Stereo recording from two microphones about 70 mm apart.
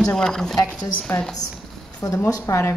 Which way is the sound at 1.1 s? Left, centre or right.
Left.